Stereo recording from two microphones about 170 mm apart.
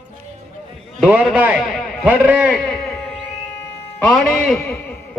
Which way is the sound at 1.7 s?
5° right (ahead or behind).